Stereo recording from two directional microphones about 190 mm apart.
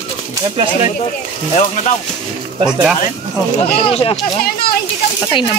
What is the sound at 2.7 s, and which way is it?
Speech, 5° right (ahead or behind).